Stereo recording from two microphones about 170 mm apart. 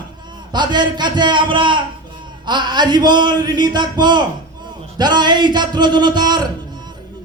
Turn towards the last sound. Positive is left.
turn(degrees=-25)  # may be behind; listen again after turning